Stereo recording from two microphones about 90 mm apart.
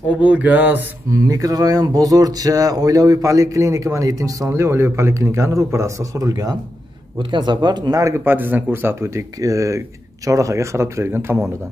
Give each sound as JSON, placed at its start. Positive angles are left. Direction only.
{"t": 0.2, "sound": "mantra", "side_deg": -15}
{"t": 1.1, "sound": "speech", "side_deg": -40}
{"t": 7.2, "sound": "speech", "side_deg": -55}
{"t": 8.0, "sound": "speech", "side_deg": -25}